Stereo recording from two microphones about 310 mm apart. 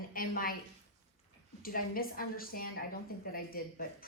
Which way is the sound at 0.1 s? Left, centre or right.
Left.